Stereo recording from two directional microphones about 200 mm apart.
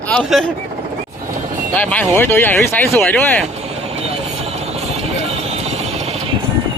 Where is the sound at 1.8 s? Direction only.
10° left (ahead or behind).